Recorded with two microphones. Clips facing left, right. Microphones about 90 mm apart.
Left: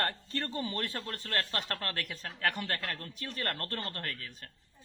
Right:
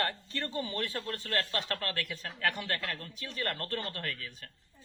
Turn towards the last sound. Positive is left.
turn(degrees=40)  # may be behind; listen again after turning